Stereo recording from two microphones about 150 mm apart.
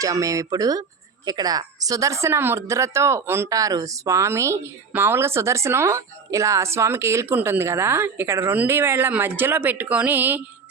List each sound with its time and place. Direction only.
0.0 s a woman's voice: 20° right (ahead or behind)